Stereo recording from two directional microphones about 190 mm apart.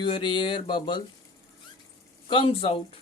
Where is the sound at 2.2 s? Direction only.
25° left (ahead or behind).